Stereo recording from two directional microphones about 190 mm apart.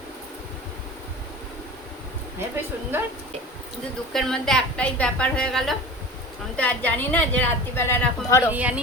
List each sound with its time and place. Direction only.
4.1 s a woman's voice: centre (ahead or behind)
8.5 s speech: 5° right (ahead or behind)